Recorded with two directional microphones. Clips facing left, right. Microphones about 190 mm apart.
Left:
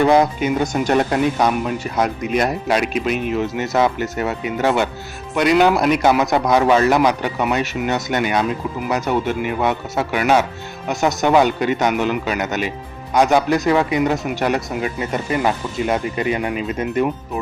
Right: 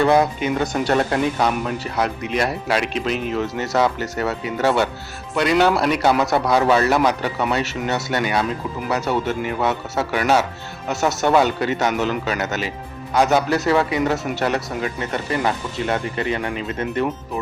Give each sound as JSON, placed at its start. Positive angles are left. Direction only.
{"t": 0.0, "sound": "speech", "side_deg": 15}
{"t": 2.8, "sound": "speech", "side_deg": -30}
{"t": 3.3, "sound": "speech", "side_deg": 15}